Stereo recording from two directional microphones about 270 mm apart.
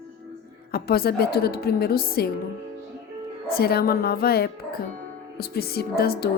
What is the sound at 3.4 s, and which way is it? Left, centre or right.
Speech, left.